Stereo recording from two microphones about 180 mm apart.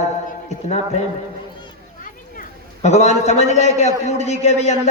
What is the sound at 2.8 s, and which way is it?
Speech, 40° left (ahead or behind).